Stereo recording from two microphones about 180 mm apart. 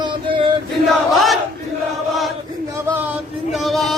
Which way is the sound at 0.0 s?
25° right (ahead or behind).